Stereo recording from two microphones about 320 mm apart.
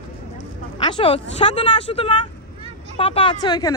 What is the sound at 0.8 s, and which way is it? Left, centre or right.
Speech, centre.